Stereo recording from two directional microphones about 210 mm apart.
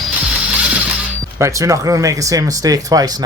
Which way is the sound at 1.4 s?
15° right (ahead or behind).